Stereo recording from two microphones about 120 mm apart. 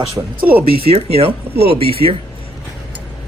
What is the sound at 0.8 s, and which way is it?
Speech, 55° right (ahead or behind).